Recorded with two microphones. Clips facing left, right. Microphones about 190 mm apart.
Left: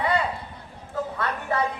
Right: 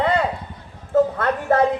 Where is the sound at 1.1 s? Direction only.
50° right (ahead or behind).